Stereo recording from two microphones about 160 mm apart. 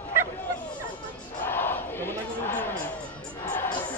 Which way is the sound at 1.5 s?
15° left (ahead or behind).